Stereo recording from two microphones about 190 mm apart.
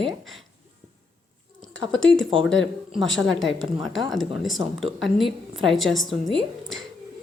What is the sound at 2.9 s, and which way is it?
A woman's voice, centre (ahead or behind).